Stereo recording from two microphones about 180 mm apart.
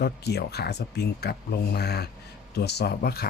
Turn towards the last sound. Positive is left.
turn(degrees=60)  # may be behind; listen again after turning